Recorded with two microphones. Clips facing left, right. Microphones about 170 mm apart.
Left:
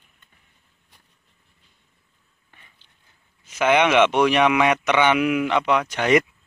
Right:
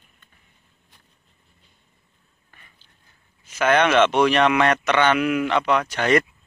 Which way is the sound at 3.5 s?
15° left (ahead or behind).